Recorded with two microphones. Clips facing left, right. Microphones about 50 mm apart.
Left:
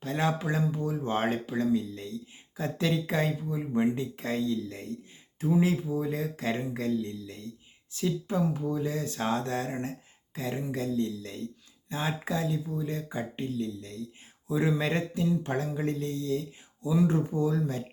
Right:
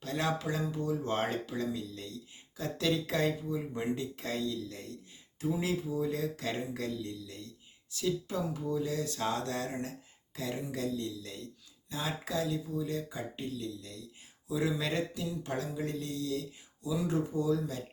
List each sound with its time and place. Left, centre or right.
0.0 s speech: left